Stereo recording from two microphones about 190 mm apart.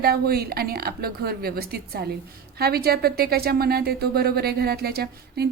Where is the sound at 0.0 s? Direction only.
55° right (ahead or behind).